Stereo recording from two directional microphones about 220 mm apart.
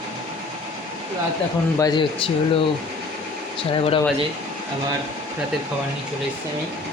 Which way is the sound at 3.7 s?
25° left (ahead or behind).